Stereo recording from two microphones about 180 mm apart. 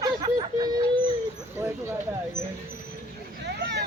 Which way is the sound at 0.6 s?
25° right (ahead or behind).